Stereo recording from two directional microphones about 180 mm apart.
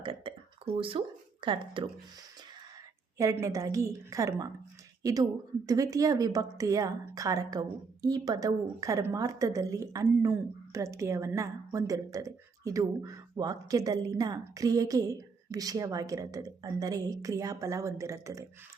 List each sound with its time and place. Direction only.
0.0 s speech: 30° right (ahead or behind)
3.2 s a woman's voice: 15° right (ahead or behind)